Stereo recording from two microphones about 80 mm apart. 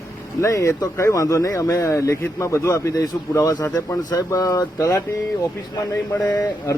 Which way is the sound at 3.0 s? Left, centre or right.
Left.